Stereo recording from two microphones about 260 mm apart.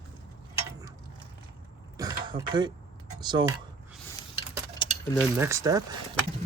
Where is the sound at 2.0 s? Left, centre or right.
Centre.